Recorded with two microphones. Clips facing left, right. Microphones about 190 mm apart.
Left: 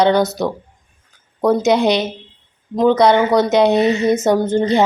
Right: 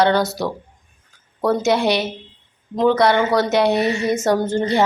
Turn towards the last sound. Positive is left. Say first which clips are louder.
# left 3 dB
turn(degrees=20)  # may be behind; listen again after turning